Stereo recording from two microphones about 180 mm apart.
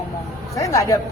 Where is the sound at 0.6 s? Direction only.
15° left (ahead or behind).